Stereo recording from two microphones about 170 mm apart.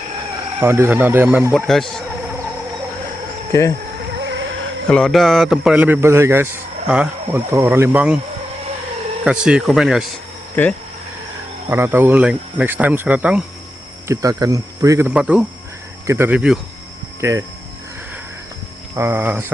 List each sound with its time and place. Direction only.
0.6 s a man's voice: 10° right (ahead or behind)
1.5 s speech: centre (ahead or behind)
3.5 s speech: 15° left (ahead or behind)
4.2 s music: 90° right
4.9 s a man's voice: 5° left (ahead or behind)
9.2 s speech: 5° right (ahead or behind)
10.5 s speech: 10° left (ahead or behind)
11.7 s a man's voice: 10° right (ahead or behind)
14.1 s a man's voice: 20° right (ahead or behind)
18.9 s a man's voice: 15° right (ahead or behind)